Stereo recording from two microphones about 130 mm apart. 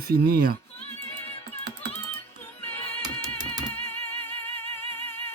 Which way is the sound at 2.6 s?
15° left (ahead or behind).